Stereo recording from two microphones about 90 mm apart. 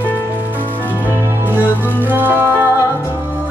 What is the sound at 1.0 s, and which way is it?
Music, 20° right (ahead or behind).